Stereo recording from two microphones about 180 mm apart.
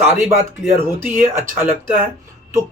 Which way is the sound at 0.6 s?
10° right (ahead or behind).